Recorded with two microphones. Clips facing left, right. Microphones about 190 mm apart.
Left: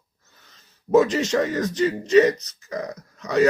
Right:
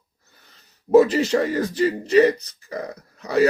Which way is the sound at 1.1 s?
35° right (ahead or behind).